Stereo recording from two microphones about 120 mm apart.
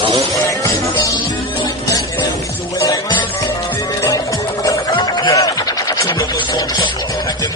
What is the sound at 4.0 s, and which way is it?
Music, 25° left (ahead or behind).